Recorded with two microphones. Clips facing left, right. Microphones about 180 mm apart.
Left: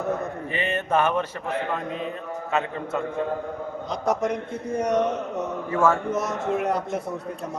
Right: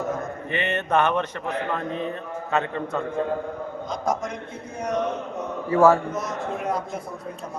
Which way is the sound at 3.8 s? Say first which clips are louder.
Left 3 dB; 70° left (ahead or behind).